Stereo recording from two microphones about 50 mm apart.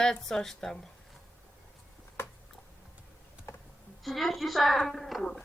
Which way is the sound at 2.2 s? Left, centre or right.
Left.